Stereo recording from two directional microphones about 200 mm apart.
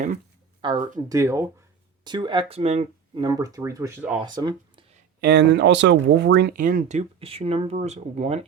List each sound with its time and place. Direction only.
0.6 s speech: 25° right (ahead or behind)
3.2 s speech: 20° right (ahead or behind)
5.2 s speech: 55° right (ahead or behind); by 8.4 s 35° right (ahead or behind)